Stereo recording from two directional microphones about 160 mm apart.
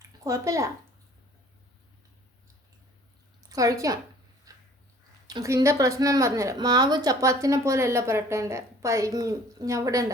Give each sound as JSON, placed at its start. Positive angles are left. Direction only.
{"t": 0.3, "sound": "a woman's voice", "side_deg": -20}
{"t": 3.5, "sound": "a woman's voice", "side_deg": -20}
{"t": 5.3, "sound": "a woman's voice", "side_deg": -20}